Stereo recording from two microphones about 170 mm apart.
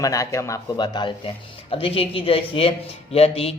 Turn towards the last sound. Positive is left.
turn(degrees=35)  # may be behind; listen again after turning